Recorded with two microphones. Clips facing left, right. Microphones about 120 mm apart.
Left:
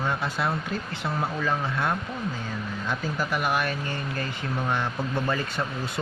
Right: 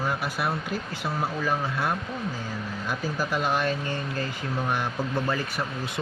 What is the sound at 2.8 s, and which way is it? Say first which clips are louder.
Speech: even; 20° left (ahead or behind).